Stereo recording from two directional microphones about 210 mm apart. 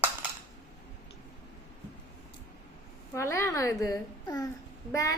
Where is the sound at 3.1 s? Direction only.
15° left (ahead or behind).